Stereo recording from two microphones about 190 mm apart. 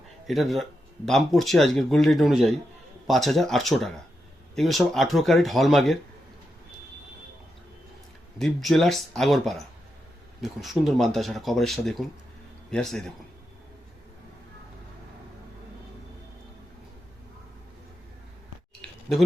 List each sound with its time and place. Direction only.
0.3 s speech: centre (ahead or behind)
8.4 s speech: centre (ahead or behind)